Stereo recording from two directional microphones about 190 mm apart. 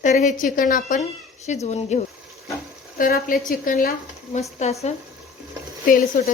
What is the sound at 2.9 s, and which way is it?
Speech, 50° left (ahead or behind).